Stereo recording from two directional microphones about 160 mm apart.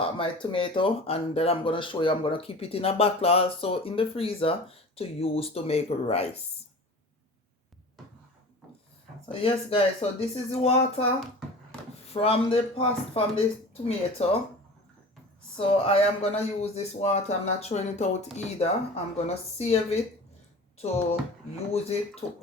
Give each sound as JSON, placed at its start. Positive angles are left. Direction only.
{"t": 0.0, "sound": "speech", "side_deg": 35}
{"t": 9.3, "sound": "speech", "side_deg": 35}
{"t": 12.1, "sound": "speech", "side_deg": 40}
{"t": 15.5, "sound": "speech", "side_deg": 35}